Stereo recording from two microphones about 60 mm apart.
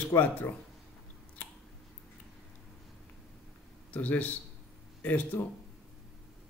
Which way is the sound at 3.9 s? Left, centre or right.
Left.